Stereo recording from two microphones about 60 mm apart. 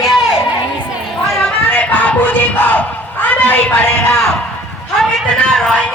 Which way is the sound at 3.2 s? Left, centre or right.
Left.